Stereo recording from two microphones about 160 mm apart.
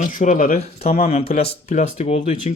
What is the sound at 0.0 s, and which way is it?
Speech, 50° left (ahead or behind).